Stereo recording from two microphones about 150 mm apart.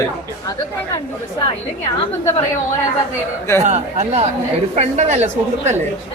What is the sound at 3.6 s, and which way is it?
A woman's voice, 50° right (ahead or behind).